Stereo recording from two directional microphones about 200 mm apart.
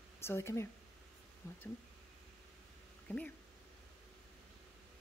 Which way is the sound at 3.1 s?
10° left (ahead or behind).